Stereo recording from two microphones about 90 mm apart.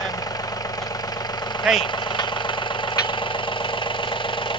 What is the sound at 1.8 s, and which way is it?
Vehicle, 60° left (ahead or behind).